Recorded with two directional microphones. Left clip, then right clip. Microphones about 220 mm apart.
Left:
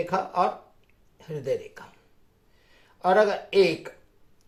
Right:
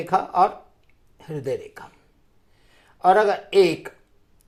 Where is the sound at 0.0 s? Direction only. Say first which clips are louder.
Right 5 dB; 40° right (ahead or behind).